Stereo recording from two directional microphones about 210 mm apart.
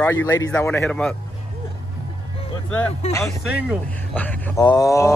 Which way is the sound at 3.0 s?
30° left (ahead or behind).